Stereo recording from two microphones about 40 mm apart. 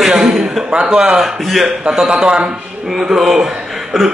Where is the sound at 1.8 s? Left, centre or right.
Centre.